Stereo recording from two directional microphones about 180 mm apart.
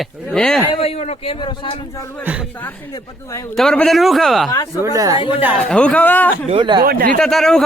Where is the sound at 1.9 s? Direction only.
15° left (ahead or behind).